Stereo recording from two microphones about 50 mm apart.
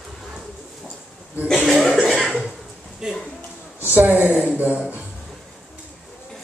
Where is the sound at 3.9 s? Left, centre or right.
Right.